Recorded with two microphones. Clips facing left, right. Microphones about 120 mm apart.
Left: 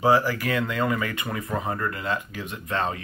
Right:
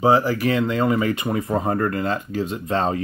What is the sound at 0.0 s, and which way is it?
Speech, 20° right (ahead or behind).